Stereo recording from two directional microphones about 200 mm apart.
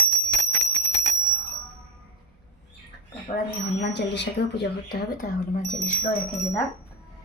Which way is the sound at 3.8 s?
60° left (ahead or behind).